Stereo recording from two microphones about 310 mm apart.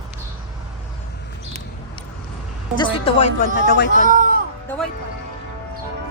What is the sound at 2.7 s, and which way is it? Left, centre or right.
Speech, centre.